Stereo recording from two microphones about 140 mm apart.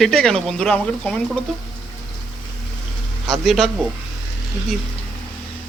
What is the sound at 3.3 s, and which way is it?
Speech, centre (ahead or behind).